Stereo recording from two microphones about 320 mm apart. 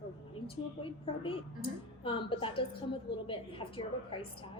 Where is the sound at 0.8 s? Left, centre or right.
Centre.